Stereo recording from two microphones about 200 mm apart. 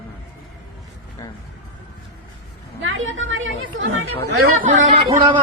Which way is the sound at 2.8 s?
75° right (ahead or behind).